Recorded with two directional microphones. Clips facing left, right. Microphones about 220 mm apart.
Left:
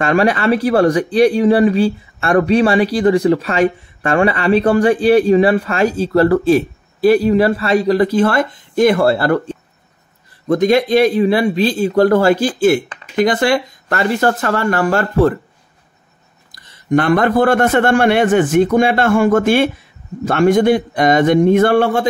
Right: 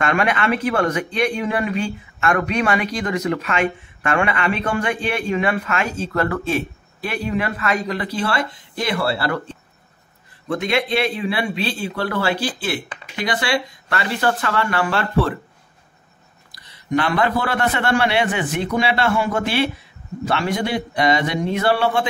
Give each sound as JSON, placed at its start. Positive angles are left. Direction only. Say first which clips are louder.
{"t": 0.0, "sound": "a man's voice", "louder": "left 6 dB", "side_deg": 35}
{"t": 16.5, "sound": "a man's voice", "louder": "left 6 dB", "side_deg": 45}